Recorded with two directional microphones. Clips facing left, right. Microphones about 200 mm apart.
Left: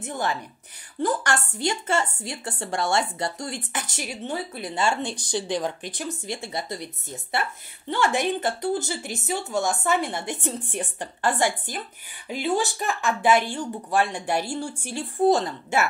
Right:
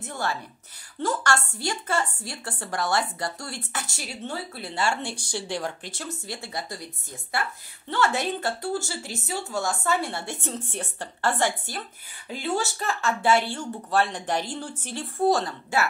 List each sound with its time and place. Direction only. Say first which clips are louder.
0.0 s a woman's voice: left 2 dB; 20° left (ahead or behind)